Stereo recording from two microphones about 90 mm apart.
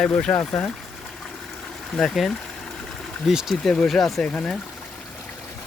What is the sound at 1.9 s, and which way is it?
Speech, centre (ahead or behind).